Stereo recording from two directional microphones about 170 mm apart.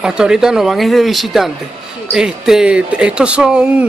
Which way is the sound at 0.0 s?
5° right (ahead or behind).